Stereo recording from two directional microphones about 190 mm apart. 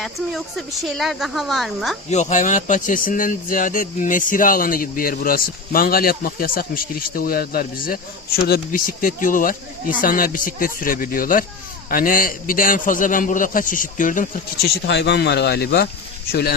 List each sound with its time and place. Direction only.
0.0 s speech: centre (ahead or behind)
2.0 s speech: 40° left (ahead or behind)
14.8 s speech: 65° left (ahead or behind)